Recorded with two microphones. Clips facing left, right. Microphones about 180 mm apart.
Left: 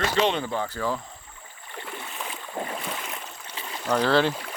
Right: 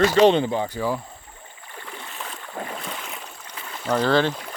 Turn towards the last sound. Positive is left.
turn(degrees=5)  # may be behind; listen again after turning